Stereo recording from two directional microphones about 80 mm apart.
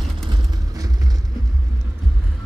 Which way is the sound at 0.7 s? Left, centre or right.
Right.